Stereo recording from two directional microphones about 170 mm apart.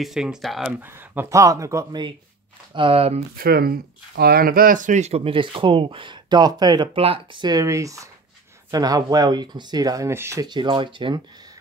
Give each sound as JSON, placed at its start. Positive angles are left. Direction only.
{"t": 0.0, "sound": "speech", "side_deg": -5}
{"t": 3.3, "sound": "speech", "side_deg": -65}